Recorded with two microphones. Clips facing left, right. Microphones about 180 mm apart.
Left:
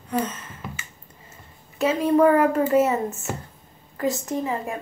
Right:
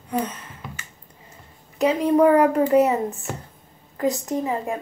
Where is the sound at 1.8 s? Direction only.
15° right (ahead or behind).